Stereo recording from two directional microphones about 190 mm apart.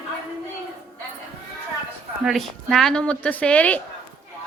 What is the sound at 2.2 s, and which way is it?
Speech, centre (ahead or behind).